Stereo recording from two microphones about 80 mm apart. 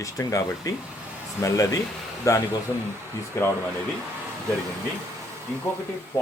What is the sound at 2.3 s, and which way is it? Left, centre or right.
Speech, left.